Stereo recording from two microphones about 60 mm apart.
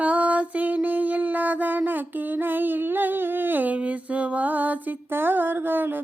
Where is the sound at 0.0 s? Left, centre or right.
Right.